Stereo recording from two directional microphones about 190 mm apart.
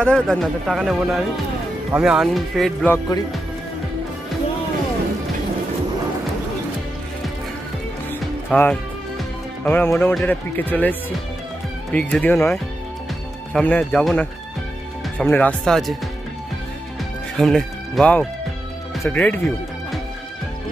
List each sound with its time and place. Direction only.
0.0 s speech: 5° left (ahead or behind)
2.9 s speech: 20° left (ahead or behind)
8.5 s speech: 10° left (ahead or behind)
17.4 s speech: 5° left (ahead or behind)